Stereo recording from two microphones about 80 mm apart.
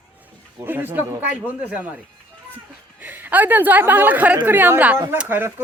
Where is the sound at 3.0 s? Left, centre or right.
Right.